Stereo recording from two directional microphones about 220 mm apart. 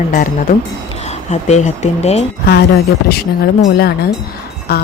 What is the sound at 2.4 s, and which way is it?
Speech, 50° left (ahead or behind).